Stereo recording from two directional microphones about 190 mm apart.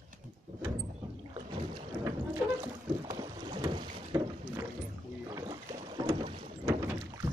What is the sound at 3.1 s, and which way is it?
Boat, 20° right (ahead or behind).